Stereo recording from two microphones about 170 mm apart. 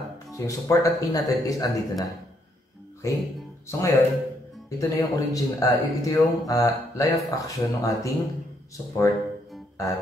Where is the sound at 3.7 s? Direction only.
20° left (ahead or behind).